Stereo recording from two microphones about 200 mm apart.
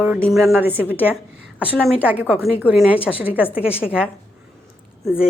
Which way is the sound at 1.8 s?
5° left (ahead or behind).